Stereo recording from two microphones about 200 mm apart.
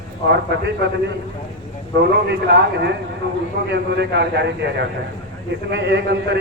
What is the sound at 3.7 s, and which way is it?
A man's voice, 55° right (ahead or behind).